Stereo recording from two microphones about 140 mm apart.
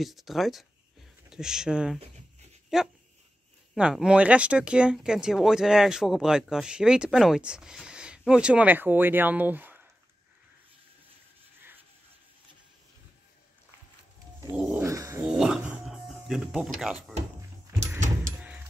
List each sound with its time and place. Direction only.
0.0 s speech: centre (ahead or behind)
14.8 s a sound: 20° right (ahead or behind)
15.2 s dog: 5° right (ahead or behind)